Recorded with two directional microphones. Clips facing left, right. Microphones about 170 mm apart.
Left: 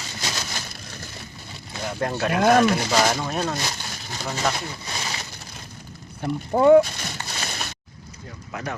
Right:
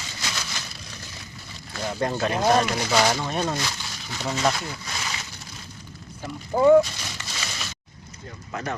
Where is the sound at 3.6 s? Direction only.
40° left (ahead or behind).